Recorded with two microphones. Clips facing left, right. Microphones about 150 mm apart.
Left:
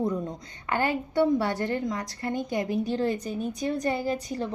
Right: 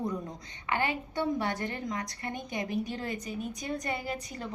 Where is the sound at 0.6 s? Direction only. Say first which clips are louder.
Left 4 dB; 40° left (ahead or behind).